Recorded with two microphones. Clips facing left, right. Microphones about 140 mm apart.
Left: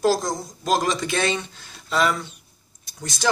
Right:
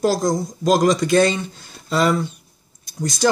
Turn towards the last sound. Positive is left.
turn(degrees=-40)  # may be behind; listen again after turning